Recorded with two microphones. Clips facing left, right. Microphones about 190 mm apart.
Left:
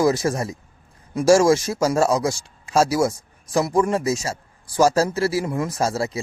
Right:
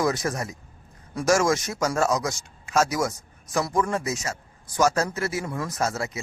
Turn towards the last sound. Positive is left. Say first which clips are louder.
# left 5 dB
turn(degrees=30)  # may be behind; listen again after turning